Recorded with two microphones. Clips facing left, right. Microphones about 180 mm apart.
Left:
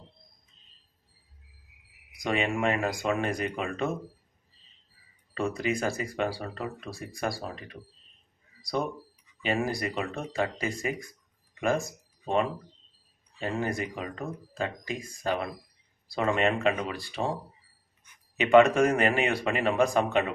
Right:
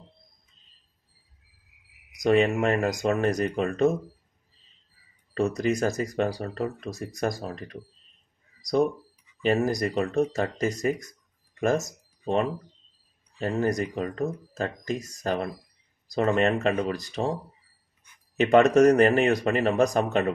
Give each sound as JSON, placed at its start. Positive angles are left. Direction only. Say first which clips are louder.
{"t": 2.1, "sound": "speech", "louder": "right 7 dB", "side_deg": -40}
{"t": 5.3, "sound": "speech", "louder": "right 4 dB", "side_deg": -45}
{"t": 9.4, "sound": "speech", "louder": "right 5 dB", "side_deg": -45}
{"t": 18.3, "sound": "speech", "louder": "right 1 dB", "side_deg": -45}